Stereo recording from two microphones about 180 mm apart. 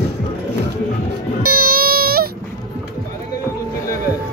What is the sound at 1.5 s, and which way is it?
Baby cry, 55° right (ahead or behind).